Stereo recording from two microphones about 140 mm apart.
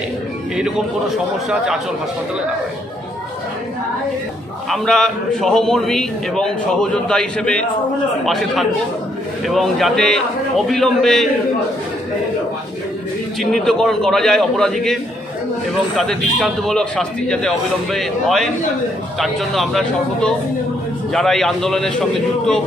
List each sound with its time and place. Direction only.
0.6 s a man's voice: 5° right (ahead or behind)
4.6 s a man's voice: 5° left (ahead or behind)
13.4 s a man's voice: 5° left (ahead or behind)
16.0 s a man's voice: 5° left (ahead or behind)